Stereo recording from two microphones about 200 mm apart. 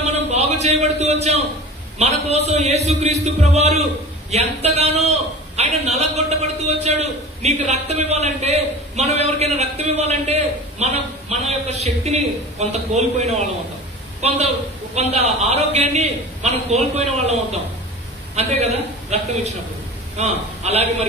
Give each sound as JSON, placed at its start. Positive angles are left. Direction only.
{"t": 0.0, "sound": "a sound", "side_deg": -35}
{"t": 2.0, "sound": "a man's voice", "side_deg": -30}
{"t": 15.0, "sound": "a man's voice", "side_deg": -35}
{"t": 20.2, "sound": "a man's voice", "side_deg": -30}